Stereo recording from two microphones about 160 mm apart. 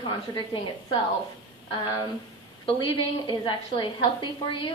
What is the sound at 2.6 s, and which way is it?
A woman's voice, 30° left (ahead or behind).